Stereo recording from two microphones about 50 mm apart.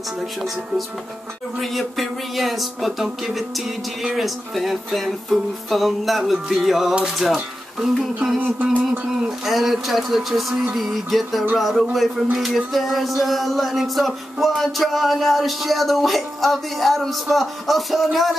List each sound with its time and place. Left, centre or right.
1.6 s speech: centre
8.4 s a sound: right
9.5 s speech: centre